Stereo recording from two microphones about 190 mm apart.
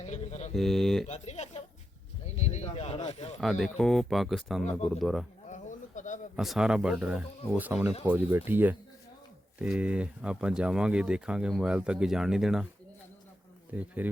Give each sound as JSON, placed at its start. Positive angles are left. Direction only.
{"t": 0.0, "sound": "mantra", "side_deg": 35}
{"t": 0.5, "sound": "speech", "side_deg": 0}
{"t": 1.0, "sound": "speech", "side_deg": 35}
{"t": 2.2, "sound": "a sound", "side_deg": 35}
{"t": 3.4, "sound": "speech", "side_deg": 0}
{"t": 5.5, "sound": "a sound", "side_deg": 40}
{"t": 6.3, "sound": "speech", "side_deg": 0}
{"t": 13.7, "sound": "speech", "side_deg": -10}